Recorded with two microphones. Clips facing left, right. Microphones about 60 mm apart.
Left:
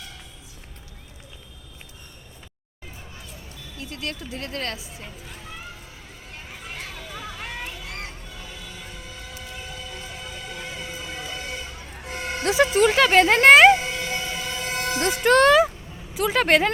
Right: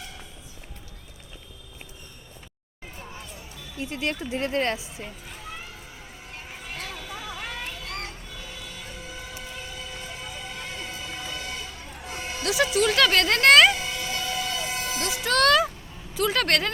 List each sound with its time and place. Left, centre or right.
3.8 s speech: right
7.4 s a sound: centre
12.0 s music: left
13.0 s music: centre
14.8 s vehicle: left
15.4 s speech: centre